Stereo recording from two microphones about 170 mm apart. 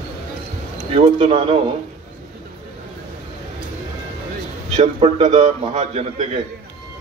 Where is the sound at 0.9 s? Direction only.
30° right (ahead or behind).